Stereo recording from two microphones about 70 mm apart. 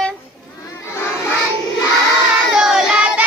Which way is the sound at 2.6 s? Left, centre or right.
Centre.